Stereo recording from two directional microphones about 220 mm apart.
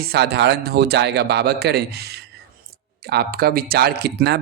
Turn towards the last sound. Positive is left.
turn(degrees=-50)  # may be behind; listen again after turning